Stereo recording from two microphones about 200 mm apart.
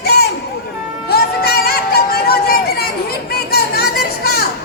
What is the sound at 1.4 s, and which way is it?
Music, 50° left (ahead or behind).